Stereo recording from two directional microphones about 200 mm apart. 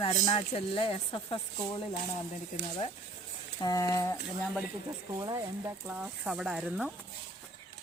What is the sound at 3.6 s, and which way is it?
Speech, 15° left (ahead or behind).